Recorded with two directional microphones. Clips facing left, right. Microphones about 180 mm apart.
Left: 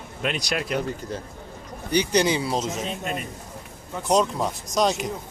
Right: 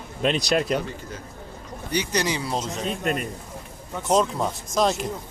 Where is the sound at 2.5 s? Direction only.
Centre (ahead or behind).